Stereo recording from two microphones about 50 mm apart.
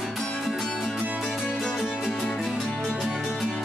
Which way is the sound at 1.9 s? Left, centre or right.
Centre.